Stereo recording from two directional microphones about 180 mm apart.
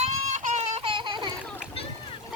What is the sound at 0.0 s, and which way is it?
Goat, 40° right (ahead or behind).